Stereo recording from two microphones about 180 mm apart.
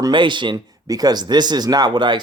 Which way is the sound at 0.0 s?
25° right (ahead or behind).